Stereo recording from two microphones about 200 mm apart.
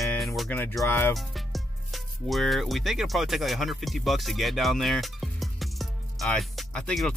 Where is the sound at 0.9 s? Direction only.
10° left (ahead or behind).